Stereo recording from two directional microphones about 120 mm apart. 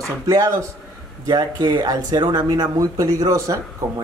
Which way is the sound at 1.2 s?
40° right (ahead or behind).